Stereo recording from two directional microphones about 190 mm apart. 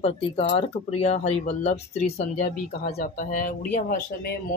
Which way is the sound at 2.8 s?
45° left (ahead or behind).